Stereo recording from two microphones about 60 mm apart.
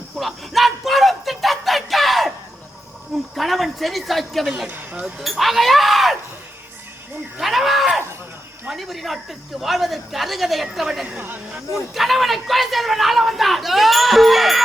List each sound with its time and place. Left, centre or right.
0.2 s a sound: centre
3.3 s a woman's voice: centre
4.7 s speech: right
5.2 s speech: centre
7.3 s speech: centre